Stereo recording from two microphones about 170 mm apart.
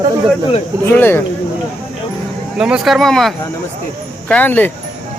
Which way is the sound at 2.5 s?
5° right (ahead or behind).